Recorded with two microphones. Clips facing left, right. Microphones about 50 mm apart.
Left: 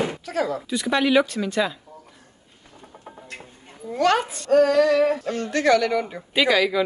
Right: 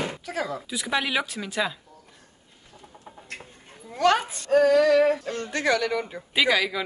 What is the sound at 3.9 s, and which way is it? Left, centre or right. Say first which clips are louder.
A woman's voice: left 1 dB; centre.